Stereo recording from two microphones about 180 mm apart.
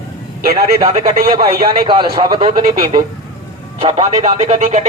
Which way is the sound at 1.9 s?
25° right (ahead or behind).